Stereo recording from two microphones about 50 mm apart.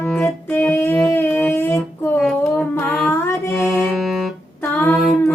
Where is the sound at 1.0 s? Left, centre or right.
Left.